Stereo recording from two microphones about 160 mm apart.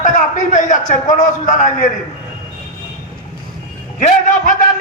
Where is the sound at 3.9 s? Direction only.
55° left (ahead or behind).